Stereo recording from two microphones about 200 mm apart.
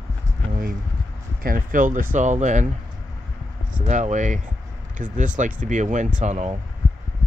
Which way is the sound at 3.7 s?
35° right (ahead or behind).